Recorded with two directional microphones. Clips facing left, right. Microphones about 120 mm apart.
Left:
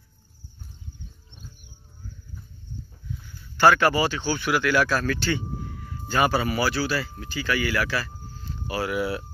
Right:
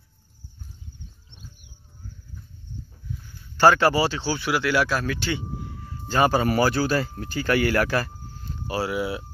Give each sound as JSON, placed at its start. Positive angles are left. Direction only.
{"t": 3.5, "sound": "speech", "side_deg": -35}
{"t": 8.6, "sound": "speech", "side_deg": -35}
{"t": 8.9, "sound": "speech", "side_deg": -20}